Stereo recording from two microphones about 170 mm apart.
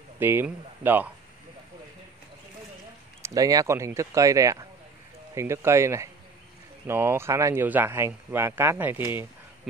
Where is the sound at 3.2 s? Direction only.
20° right (ahead or behind).